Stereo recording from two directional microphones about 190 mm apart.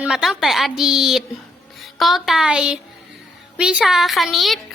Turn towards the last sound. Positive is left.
turn(degrees=0)  # may be behind; listen again after turning